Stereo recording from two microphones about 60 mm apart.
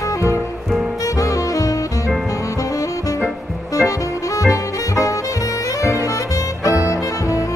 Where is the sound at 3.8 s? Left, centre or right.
Left.